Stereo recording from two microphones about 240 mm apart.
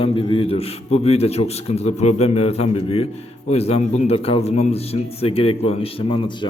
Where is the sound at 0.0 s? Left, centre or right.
Left.